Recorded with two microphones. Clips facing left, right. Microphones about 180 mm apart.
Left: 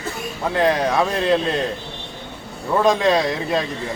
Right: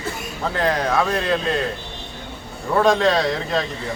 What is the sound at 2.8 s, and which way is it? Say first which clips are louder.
Speech: even; 10° left (ahead or behind).